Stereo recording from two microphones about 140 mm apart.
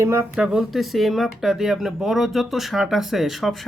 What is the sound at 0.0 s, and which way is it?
Speech, 20° right (ahead or behind).